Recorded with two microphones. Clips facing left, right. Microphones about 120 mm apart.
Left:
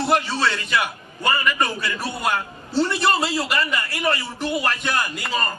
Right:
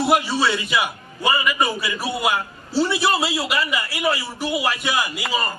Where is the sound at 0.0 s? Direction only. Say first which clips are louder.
Right 2 dB; 10° right (ahead or behind).